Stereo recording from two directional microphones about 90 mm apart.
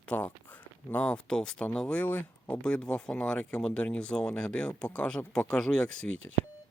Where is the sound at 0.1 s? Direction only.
15° left (ahead or behind).